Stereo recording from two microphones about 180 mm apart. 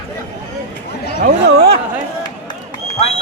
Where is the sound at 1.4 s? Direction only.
65° right (ahead or behind).